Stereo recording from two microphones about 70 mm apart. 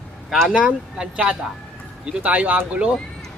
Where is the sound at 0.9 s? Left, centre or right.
Centre.